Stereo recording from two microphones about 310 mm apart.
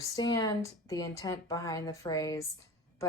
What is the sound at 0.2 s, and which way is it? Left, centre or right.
A woman's voice, centre.